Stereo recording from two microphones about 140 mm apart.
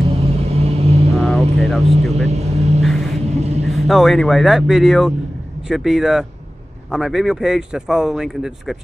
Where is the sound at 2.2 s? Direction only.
50° right (ahead or behind).